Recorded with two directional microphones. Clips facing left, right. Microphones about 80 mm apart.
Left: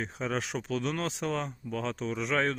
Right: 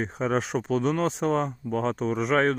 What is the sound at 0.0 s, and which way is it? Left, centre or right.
Speech, right.